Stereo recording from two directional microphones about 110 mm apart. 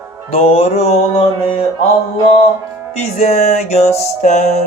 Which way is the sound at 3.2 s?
90° left.